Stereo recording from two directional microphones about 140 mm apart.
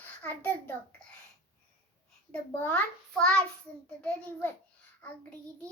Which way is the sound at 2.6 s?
10° left (ahead or behind).